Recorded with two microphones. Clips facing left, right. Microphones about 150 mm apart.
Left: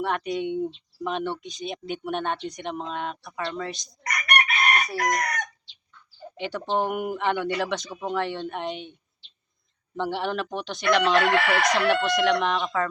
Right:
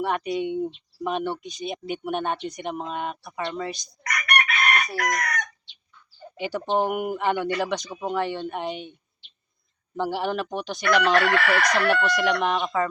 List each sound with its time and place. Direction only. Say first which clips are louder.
0.0 s speech: right 1 dB; centre (ahead or behind)
4.0 s chicken: even; 30° left (ahead or behind)
6.3 s speech: right 2 dB; 5° right (ahead or behind)
10.0 s speech: right 1 dB; 5° right (ahead or behind)
11.2 s chicken: even; 20° left (ahead or behind)
12.0 s speech: left 1 dB; centre (ahead or behind)